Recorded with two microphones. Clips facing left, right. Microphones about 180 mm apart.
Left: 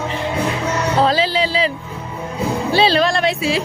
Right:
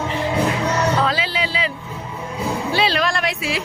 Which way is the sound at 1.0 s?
35° left (ahead or behind).